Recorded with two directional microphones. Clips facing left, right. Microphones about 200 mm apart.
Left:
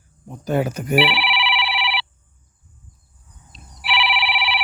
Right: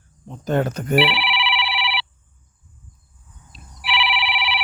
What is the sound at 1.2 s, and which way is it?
Telephone bell ringing, 45° left (ahead or behind).